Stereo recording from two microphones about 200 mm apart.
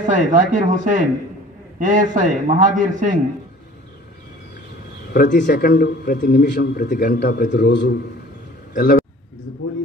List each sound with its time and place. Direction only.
0.1 s a man's voice: 40° right (ahead or behind)
5.1 s a man's voice: 50° left (ahead or behind)